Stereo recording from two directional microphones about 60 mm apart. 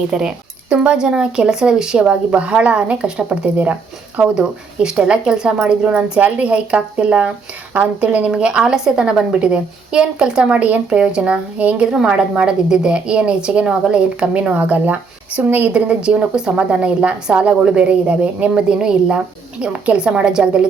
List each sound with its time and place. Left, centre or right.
0.1 s speech: centre
11.9 s a woman's voice: centre; by 15.7 s right
15.7 s speech: centre